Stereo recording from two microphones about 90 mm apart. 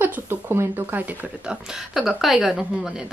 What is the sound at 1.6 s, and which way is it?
Speech, 5° right (ahead or behind).